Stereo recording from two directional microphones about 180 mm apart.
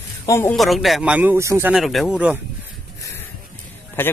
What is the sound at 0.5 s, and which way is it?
Speech, centre (ahead or behind).